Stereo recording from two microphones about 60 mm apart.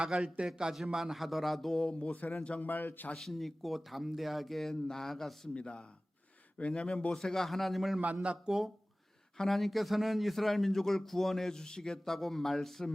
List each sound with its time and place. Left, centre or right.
0.0 s a man's voice: centre
1.8 s speech: centre
2.6 s a man's voice: left
3.2 s speech: centre
5.5 s speech: centre
8.0 s a man's voice: right
8.4 s speech: centre